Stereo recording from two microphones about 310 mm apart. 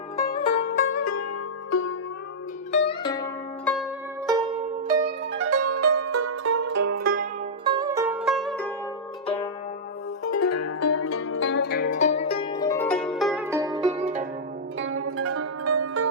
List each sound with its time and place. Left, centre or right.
0.4 s music: left
0.9 s zither: left
1.7 s zither: left
2.7 s zither: centre
4.3 s pizzicato: centre
5.0 s music: right
7.0 s music: right
7.6 s music: centre
9.2 s zither: centre
10.2 s zither: left; by 14.0 s centre
14.8 s zither: right